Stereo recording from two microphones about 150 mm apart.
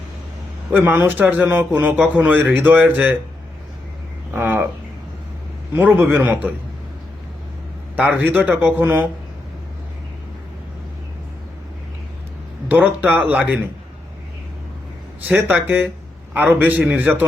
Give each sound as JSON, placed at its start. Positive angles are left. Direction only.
{"t": 0.7, "sound": "speech", "side_deg": -10}
{"t": 4.4, "sound": "speech", "side_deg": -10}
{"t": 5.7, "sound": "speech", "side_deg": -10}
{"t": 7.9, "sound": "speech", "side_deg": -10}
{"t": 12.6, "sound": "speech", "side_deg": -10}
{"t": 15.3, "sound": "speech", "side_deg": -10}